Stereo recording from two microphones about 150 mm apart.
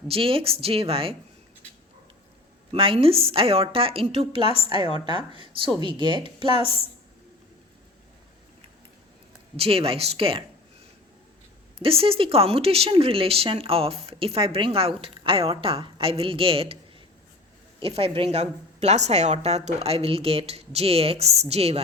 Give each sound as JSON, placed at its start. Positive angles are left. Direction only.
{"t": 0.1, "sound": "speech", "side_deg": -40}
{"t": 2.7, "sound": "speech", "side_deg": -35}
{"t": 9.6, "sound": "speech", "side_deg": -40}
{"t": 11.8, "sound": "speech", "side_deg": -40}
{"t": 17.7, "sound": "a woman's voice", "side_deg": -40}